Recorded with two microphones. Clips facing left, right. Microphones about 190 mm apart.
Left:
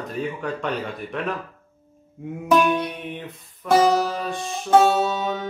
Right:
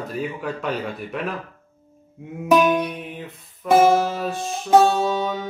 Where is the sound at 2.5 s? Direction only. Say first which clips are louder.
Right 2 dB; centre (ahead or behind).